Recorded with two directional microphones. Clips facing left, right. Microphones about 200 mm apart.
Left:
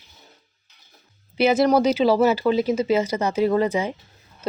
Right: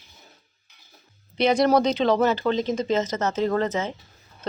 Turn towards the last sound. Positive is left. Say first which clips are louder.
# left 3 dB
turn(degrees=10)  # may be behind; listen again after turning